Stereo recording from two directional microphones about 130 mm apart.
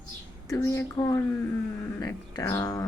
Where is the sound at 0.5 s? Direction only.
20° left (ahead or behind).